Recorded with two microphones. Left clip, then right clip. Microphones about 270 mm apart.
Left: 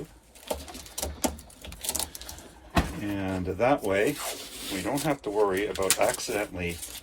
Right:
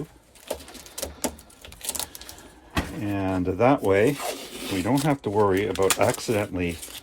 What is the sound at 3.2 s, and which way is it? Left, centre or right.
Speech, right.